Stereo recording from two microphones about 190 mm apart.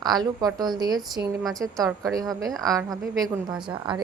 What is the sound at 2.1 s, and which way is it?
Speech, 20° right (ahead or behind).